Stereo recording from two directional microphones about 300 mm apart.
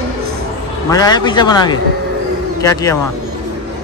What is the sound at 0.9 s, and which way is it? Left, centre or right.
Speech, centre.